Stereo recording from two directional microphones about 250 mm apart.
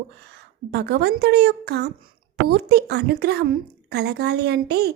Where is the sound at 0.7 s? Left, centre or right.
Right.